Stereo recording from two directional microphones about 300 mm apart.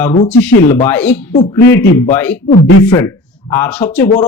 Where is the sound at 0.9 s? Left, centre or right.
Centre.